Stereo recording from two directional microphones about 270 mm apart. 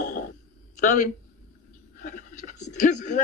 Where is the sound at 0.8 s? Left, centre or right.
Left.